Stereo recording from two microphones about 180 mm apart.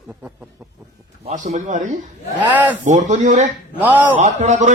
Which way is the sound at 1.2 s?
40° right (ahead or behind).